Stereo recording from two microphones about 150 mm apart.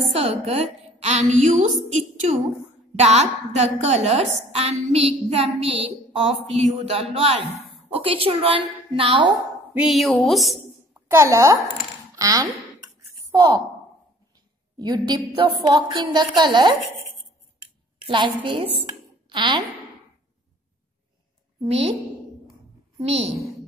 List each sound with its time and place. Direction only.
0.1 s a woman's voice: 40° right (ahead or behind)
9.8 s speech: centre (ahead or behind)
11.1 s a woman's voice: 20° right (ahead or behind)
14.8 s a woman's voice: 30° right (ahead or behind)
18.0 s a woman's voice: 35° right (ahead or behind)
18.8 s a sound: 30° right (ahead or behind)
21.5 s a woman's voice: 40° right (ahead or behind)
22.9 s a woman's voice: 45° right (ahead or behind)